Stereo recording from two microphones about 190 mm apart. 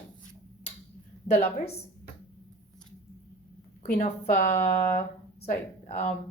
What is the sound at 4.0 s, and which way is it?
Speech, 40° left (ahead or behind).